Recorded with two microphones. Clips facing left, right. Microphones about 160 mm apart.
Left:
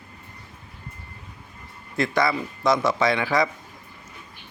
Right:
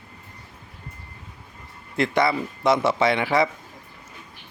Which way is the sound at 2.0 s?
25° right (ahead or behind).